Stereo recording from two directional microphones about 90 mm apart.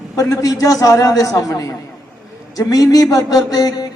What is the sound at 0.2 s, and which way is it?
A man's voice, 40° left (ahead or behind).